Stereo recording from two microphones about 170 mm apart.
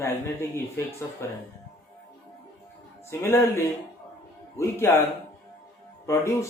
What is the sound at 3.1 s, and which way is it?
Speech, 15° left (ahead or behind).